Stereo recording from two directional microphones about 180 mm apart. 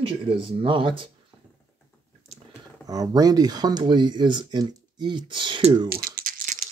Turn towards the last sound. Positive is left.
turn(degrees=-45)  # may be behind; listen again after turning